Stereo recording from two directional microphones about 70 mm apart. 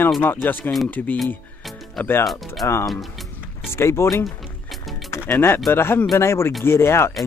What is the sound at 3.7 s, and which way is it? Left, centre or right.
Speech, left.